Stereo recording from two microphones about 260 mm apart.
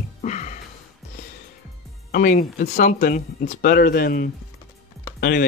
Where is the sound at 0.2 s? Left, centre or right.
Left.